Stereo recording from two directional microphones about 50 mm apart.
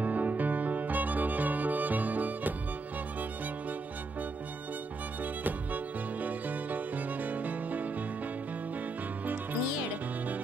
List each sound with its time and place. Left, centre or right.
0.0 s music: right
5.2 s music: right
9.2 s music: right